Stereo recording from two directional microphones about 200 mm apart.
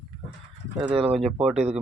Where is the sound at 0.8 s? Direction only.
5° right (ahead or behind).